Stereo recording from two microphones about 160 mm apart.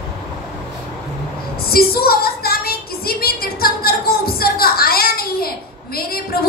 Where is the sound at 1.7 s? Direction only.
70° left (ahead or behind).